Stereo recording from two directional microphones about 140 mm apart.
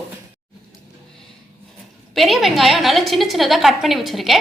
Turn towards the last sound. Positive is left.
turn(degrees=0)  # may be behind; listen again after turning